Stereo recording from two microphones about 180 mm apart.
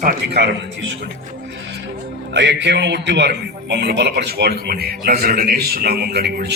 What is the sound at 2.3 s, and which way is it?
Speech, 80° right.